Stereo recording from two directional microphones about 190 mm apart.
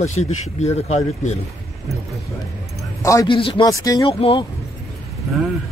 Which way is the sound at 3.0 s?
15° left (ahead or behind).